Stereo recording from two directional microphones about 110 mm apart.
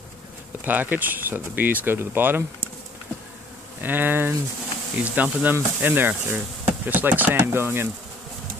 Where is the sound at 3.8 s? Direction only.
15° right (ahead or behind).